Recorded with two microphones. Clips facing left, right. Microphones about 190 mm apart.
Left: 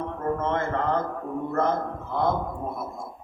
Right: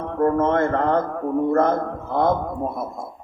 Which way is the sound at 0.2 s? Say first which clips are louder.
Right 9 dB; 55° right (ahead or behind).